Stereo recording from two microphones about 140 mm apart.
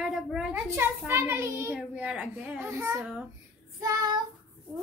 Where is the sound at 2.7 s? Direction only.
20° right (ahead or behind).